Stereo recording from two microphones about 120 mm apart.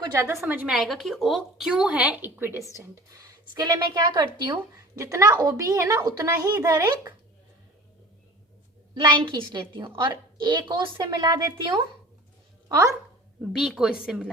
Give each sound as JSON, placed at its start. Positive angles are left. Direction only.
{"t": 0.3, "sound": "speech", "side_deg": -15}
{"t": 0.9, "sound": "a woman's voice", "side_deg": 0}
{"t": 9.0, "sound": "a woman's voice", "side_deg": -35}
{"t": 12.6, "sound": "speech", "side_deg": -30}
{"t": 13.4, "sound": "a woman's voice", "side_deg": -5}